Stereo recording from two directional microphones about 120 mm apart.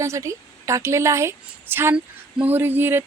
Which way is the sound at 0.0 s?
25° right (ahead or behind).